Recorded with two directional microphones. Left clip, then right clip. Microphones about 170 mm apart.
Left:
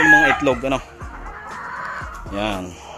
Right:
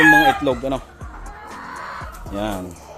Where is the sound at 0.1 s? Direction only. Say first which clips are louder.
Left 1 dB; 10° right (ahead or behind).